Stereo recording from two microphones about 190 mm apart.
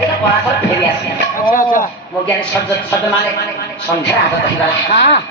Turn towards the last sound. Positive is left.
turn(degrees=65)  # may be behind; listen again after turning